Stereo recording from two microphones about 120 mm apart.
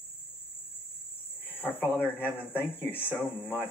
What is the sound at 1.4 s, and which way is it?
Cricket, 15° left (ahead or behind).